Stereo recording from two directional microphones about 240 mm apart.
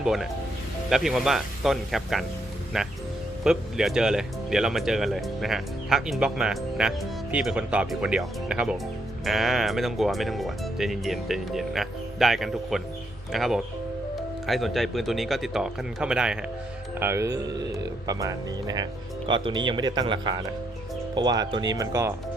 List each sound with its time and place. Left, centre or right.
0.0 s speech: centre